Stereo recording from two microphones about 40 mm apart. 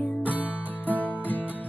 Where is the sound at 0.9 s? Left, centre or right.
Left.